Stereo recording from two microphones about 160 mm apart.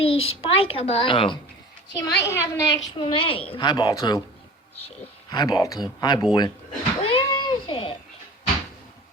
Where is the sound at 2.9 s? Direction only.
35° left (ahead or behind).